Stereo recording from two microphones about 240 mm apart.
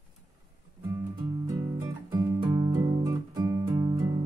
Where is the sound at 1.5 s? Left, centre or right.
Centre.